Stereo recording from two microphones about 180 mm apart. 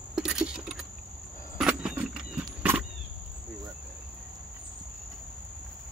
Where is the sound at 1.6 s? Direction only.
5° right (ahead or behind).